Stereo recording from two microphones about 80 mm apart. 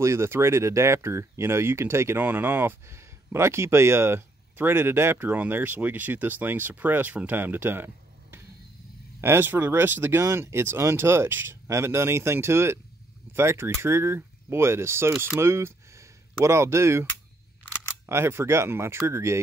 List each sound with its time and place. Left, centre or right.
0.0 s speech: right
18.0 s speech: right